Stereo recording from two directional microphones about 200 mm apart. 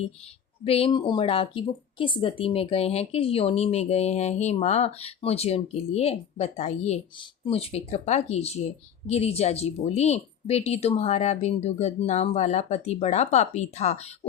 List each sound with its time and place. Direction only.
0.6 s speech: 30° left (ahead or behind)